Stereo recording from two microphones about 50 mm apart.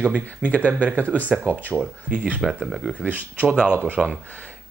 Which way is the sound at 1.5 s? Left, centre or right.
Right.